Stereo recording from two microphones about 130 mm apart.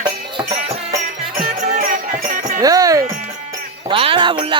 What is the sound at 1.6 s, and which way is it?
Music, 80° right.